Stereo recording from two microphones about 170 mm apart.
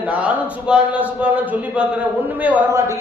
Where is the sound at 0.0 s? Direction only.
10° right (ahead or behind).